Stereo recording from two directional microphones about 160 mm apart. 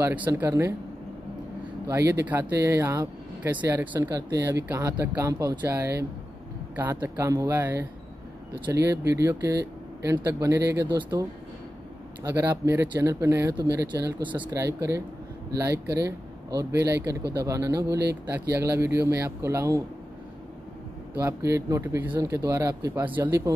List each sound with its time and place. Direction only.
0.0 s speech: 15° right (ahead or behind)
1.9 s speech: 15° right (ahead or behind)
21.2 s speech: 15° right (ahead or behind)